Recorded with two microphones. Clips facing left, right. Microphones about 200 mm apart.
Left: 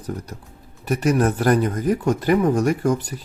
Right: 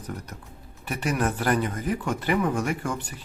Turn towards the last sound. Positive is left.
turn(degrees=40)  # may be behind; listen again after turning